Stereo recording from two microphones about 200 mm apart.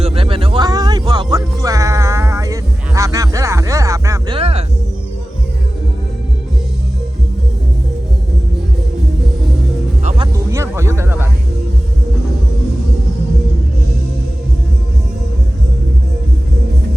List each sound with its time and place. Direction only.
0.0 s music: 30° right (ahead or behind)
4.4 s music: 30° right (ahead or behind)
10.0 s music: 35° right (ahead or behind)
10.3 s music: 15° right (ahead or behind)